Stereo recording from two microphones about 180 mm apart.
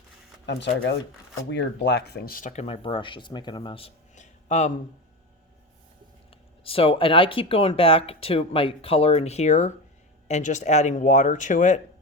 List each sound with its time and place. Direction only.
0.4 s speech: 75° left (ahead or behind); by 4.7 s 40° left (ahead or behind)
6.7 s speech: 30° left (ahead or behind)